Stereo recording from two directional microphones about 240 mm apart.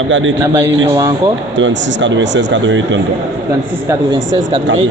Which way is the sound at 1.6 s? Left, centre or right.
Right.